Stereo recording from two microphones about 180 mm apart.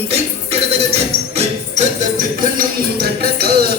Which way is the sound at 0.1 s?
35° right (ahead or behind).